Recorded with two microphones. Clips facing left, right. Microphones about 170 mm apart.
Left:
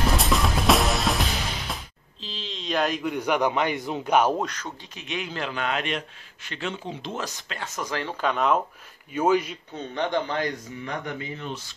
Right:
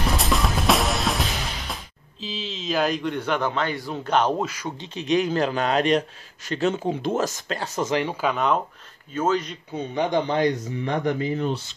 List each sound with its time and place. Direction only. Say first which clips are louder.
0.1 s music: even; centre (ahead or behind)
2.2 s a man's voice: right 4 dB; centre (ahead or behind)
4.4 s speech: right 2 dB; 10° right (ahead or behind)
4.9 s a man's voice: right 12 dB; 40° right (ahead or behind)
7.8 s speech: right 4 dB; 15° right (ahead or behind); by 8.5 s centre (ahead or behind)
9.1 s speech: left 1 dB; 10° left (ahead or behind)
9.8 s speech: right 3 dB; 10° right (ahead or behind); by 11.6 s 35° right (ahead or behind)